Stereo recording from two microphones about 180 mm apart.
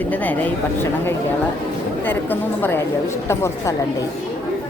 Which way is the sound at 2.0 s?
10° left (ahead or behind).